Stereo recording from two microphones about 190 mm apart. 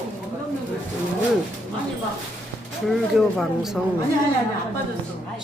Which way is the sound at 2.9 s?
Centre (ahead or behind).